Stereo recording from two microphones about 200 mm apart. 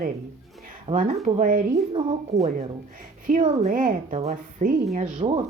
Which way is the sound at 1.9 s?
30° right (ahead or behind).